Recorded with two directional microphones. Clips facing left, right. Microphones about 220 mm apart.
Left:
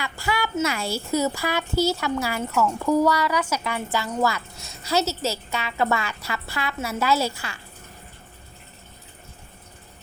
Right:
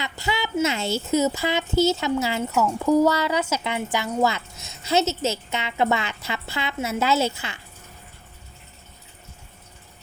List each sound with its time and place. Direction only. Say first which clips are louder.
0.0 s speech: even; 20° right (ahead or behind)